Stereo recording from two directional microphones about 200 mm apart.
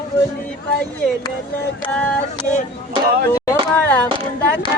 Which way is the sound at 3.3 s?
15° left (ahead or behind).